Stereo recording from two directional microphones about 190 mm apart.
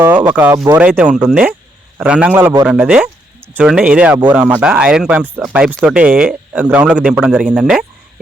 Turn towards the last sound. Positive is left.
turn(degrees=-5)  # may be behind; listen again after turning